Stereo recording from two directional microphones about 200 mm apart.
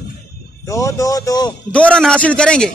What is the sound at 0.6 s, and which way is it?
Speech, 15° left (ahead or behind).